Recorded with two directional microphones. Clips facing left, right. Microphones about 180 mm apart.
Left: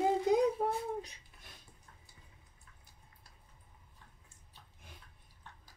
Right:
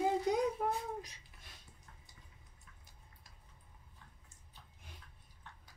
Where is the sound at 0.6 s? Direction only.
25° left (ahead or behind).